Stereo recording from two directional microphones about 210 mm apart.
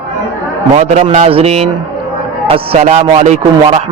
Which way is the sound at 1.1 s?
30° right (ahead or behind).